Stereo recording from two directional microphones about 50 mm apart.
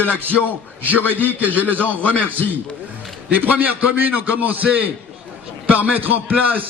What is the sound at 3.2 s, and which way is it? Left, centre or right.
A man's voice, right.